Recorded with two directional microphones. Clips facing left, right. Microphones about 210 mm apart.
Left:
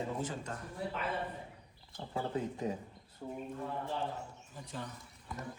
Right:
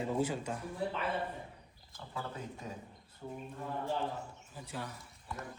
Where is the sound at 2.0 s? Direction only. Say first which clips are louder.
Left 5 dB; 30° left (ahead or behind).